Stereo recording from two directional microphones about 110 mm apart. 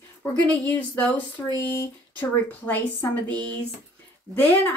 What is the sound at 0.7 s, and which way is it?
Speech, 15° left (ahead or behind).